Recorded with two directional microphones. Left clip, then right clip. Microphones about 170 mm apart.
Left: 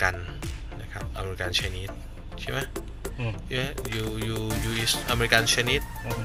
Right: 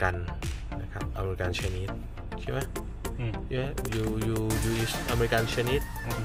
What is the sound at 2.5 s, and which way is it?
Speech, 25° right (ahead or behind).